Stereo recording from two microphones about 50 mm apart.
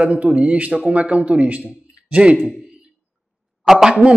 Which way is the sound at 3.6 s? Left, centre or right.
Centre.